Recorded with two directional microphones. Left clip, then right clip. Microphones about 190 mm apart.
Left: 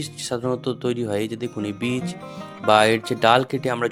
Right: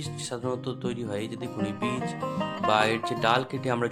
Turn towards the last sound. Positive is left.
turn(degrees=30)  # may be behind; listen again after turning